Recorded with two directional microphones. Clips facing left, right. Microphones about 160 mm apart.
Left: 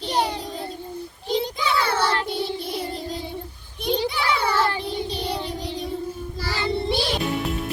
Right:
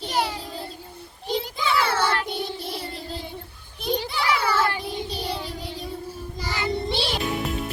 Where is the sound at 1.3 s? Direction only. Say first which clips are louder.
Left 1 dB; centre (ahead or behind).